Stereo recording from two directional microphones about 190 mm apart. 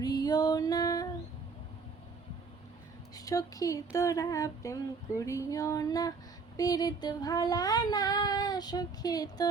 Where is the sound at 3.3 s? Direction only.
20° left (ahead or behind).